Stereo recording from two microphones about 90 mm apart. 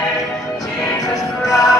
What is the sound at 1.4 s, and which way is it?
Music, 40° left (ahead or behind).